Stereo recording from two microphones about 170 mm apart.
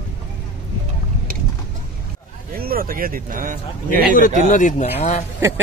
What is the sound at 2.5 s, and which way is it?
Speech, 60° right (ahead or behind).